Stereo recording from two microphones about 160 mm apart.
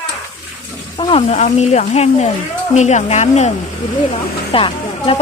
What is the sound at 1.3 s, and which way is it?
Speech, 45° left (ahead or behind).